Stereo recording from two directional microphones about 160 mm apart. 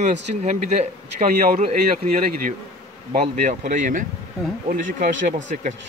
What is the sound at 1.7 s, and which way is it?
Speech, 65° right (ahead or behind).